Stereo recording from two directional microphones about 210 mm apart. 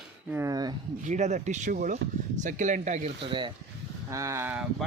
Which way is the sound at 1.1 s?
35° right (ahead or behind).